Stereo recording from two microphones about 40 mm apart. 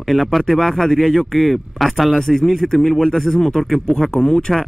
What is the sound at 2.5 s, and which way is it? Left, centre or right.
Speech, centre.